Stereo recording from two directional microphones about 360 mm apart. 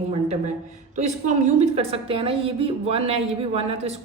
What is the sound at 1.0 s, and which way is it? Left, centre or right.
A woman's voice, centre.